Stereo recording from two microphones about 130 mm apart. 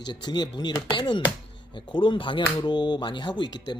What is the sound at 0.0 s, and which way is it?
Speech, 35° left (ahead or behind).